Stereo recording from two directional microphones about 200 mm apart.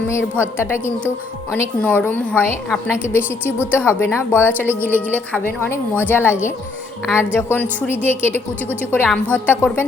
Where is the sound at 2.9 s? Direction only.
10° right (ahead or behind).